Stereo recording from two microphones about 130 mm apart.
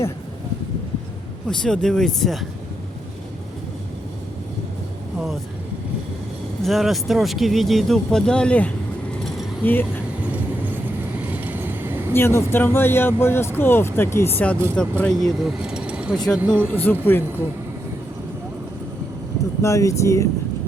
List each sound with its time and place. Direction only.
1.5 s speech: 5° left (ahead or behind)
6.6 s speech: centre (ahead or behind)
10.3 s train: 15° right (ahead or behind)
11.3 s vehicle: 15° right (ahead or behind)
12.1 s speech: 20° left (ahead or behind); by 16.1 s 5° right (ahead or behind)
16.1 s speech: 5° left (ahead or behind)
16.4 s speech: 15° right (ahead or behind)
16.7 s speech: 15° left (ahead or behind)
19.6 s speech: 25° left (ahead or behind)